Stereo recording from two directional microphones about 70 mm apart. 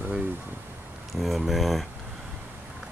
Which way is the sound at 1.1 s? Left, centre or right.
Centre.